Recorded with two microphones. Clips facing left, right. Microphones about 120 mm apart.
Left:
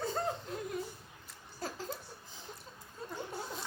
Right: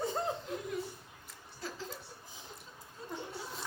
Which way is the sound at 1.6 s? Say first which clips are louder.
Left 2 dB; 45° left (ahead or behind).